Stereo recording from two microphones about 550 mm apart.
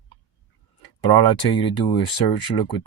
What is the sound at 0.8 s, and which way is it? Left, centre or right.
Speech, left.